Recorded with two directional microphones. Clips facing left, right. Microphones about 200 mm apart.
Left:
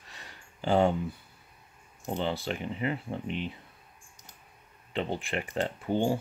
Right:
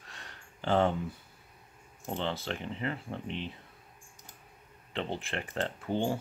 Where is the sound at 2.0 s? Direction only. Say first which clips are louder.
Left 3 dB; 10° left (ahead or behind).